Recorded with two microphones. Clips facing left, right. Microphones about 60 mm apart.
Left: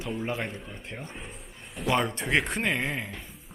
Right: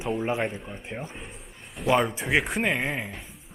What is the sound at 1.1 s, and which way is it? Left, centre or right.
Speech, centre.